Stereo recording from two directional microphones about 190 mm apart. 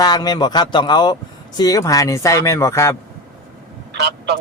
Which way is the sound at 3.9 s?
60° right (ahead or behind).